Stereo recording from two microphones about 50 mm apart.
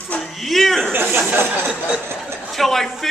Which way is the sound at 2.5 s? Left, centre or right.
Centre.